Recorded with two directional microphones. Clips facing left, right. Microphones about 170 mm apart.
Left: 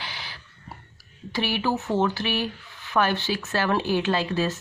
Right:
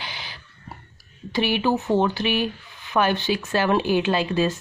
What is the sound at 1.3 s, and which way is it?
Speech, 20° right (ahead or behind).